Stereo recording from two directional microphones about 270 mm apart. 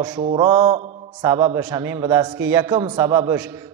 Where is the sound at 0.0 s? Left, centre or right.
Centre.